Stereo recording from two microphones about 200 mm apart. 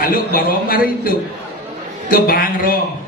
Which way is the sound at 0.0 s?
45° left (ahead or behind).